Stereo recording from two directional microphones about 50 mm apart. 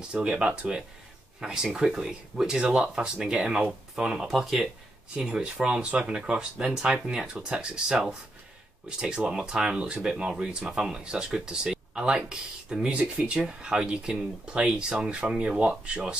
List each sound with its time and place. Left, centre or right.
0.1 s speech: centre
4.3 s speech: centre
5.2 s speech: centre